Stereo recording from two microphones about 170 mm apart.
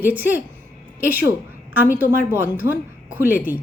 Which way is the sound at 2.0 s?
10° right (ahead or behind).